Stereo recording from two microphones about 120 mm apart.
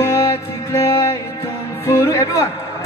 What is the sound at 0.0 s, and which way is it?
Music, 25° left (ahead or behind).